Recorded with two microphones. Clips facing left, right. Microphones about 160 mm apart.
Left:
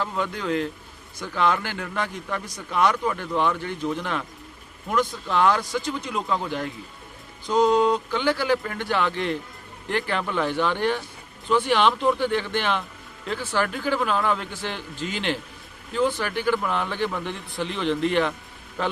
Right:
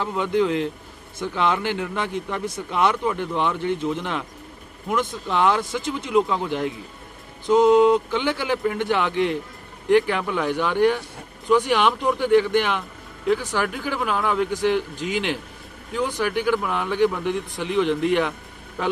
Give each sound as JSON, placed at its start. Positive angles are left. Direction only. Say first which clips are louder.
{"t": 0.0, "sound": "a man's voice", "louder": "right 6 dB", "side_deg": -20}
{"t": 7.4, "sound": "a man's voice", "louder": "right 4 dB", "side_deg": -20}